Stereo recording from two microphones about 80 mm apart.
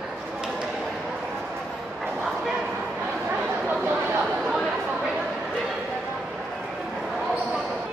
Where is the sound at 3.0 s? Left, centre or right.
Right.